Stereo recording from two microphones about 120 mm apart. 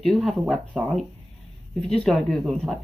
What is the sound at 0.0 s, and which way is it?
Speech, centre (ahead or behind).